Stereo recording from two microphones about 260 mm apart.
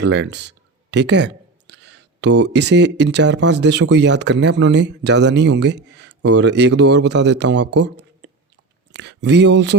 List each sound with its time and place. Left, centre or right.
0.0 s speech: right